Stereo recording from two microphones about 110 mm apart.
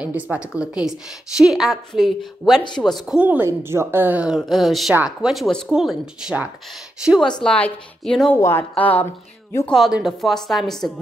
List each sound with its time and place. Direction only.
0.0 s a woman's voice: 10° right (ahead or behind)
3.2 s a woman's voice: 15° right (ahead or behind)
7.4 s a woman's voice: 10° left (ahead or behind)
8.4 s speech: 25° left (ahead or behind)
9.7 s a woman's voice: centre (ahead or behind)